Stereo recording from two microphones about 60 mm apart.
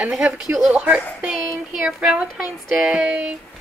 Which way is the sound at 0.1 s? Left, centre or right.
Centre.